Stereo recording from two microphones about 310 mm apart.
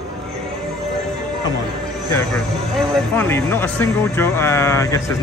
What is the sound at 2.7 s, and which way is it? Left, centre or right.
Speech, centre.